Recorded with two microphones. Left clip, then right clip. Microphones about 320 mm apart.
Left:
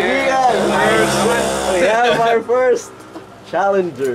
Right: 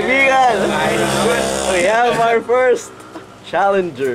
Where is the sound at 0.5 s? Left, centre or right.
Centre.